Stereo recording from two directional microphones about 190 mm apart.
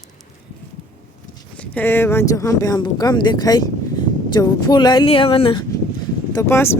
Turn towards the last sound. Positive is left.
turn(degrees=15)  # may be behind; listen again after turning